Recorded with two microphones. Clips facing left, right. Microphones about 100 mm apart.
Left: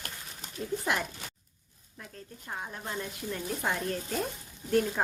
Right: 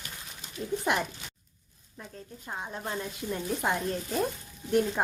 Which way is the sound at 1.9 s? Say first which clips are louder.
Right 2 dB; 15° right (ahead or behind).